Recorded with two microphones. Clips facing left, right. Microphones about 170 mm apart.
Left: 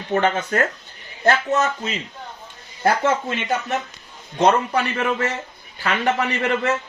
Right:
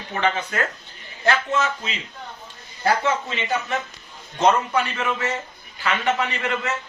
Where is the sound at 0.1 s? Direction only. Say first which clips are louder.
Left 4 dB; 45° left (ahead or behind).